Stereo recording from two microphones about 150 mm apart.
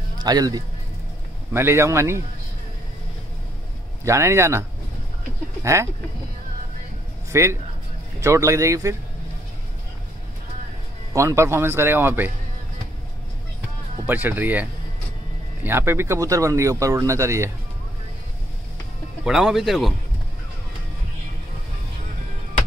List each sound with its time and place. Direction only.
0.2 s speech: 25° right (ahead or behind)
1.5 s speech: 15° right (ahead or behind)
4.0 s speech: 20° right (ahead or behind)
7.2 s a man's voice: 20° right (ahead or behind)
11.1 s speech: 20° right (ahead or behind)
14.0 s speech: 10° right (ahead or behind)
19.2 s speech: 5° right (ahead or behind)